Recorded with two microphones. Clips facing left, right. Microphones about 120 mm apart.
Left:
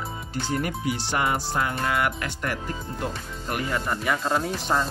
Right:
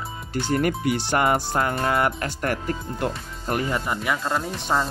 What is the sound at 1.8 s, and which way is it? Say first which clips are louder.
Speech: right 3 dB; 35° right (ahead or behind).